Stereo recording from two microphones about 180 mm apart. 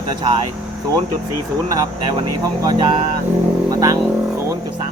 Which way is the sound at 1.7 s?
20° right (ahead or behind).